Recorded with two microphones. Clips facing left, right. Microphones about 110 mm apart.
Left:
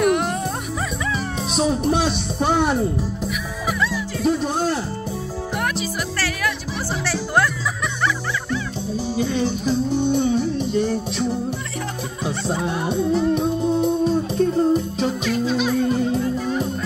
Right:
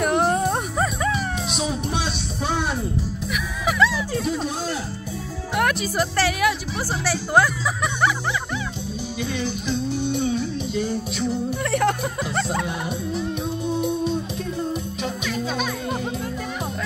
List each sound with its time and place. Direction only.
0.0 s music: 35° right (ahead or behind)
1.5 s music: 45° left (ahead or behind)
3.6 s music: 90° right
4.3 s music: 55° left (ahead or behind)
5.6 s music: 60° right (ahead or behind)
6.1 s music: 20° right (ahead or behind)
9.1 s music: 35° left (ahead or behind)
12.6 s music: 30° left (ahead or behind)